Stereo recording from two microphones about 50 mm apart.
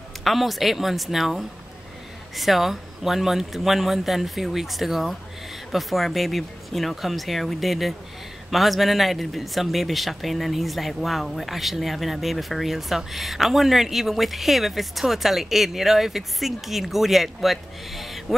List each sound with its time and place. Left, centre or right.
0.2 s speech: centre